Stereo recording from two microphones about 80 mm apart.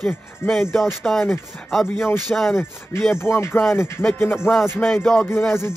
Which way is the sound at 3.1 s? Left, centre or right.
Left.